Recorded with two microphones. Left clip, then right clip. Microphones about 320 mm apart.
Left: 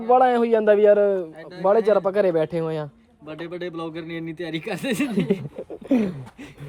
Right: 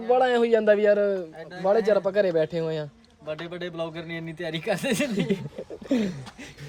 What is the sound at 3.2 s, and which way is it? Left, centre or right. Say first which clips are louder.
A man's voice: left 1 dB; centre.